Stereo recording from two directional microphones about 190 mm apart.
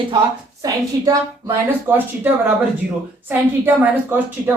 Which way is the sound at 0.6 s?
20° right (ahead or behind).